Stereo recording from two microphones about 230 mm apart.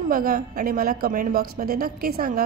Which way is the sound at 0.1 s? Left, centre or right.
Right.